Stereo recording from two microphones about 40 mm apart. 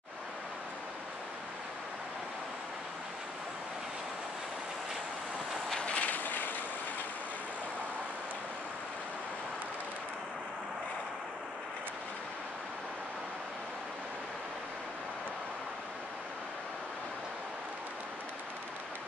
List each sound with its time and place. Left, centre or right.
5.8 s vehicle: left
6.0 s vehicle: left